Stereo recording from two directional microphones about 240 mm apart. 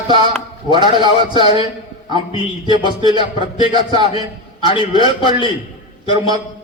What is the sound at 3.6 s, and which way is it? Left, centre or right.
A man's voice, left.